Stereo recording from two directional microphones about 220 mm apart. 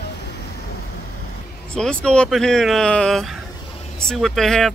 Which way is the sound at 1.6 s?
5° left (ahead or behind).